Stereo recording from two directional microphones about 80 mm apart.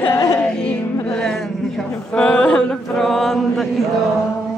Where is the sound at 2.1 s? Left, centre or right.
Centre.